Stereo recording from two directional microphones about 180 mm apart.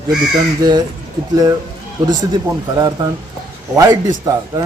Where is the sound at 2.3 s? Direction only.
20° right (ahead or behind).